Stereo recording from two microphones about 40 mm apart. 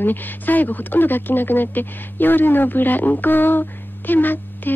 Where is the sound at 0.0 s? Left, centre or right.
Left.